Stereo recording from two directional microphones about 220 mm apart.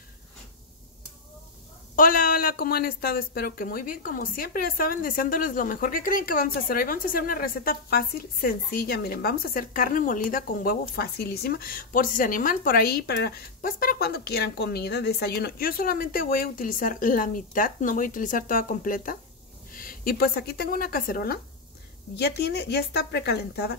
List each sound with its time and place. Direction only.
2.0 s a woman's voice: 40° left (ahead or behind)